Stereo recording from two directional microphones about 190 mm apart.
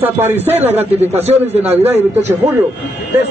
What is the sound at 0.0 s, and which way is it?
Speech, 10° right (ahead or behind).